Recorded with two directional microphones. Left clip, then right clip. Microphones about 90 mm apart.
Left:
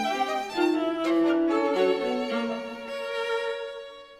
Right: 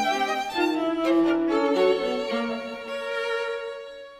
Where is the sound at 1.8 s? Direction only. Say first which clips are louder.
Right 3 dB; 55° right (ahead or behind).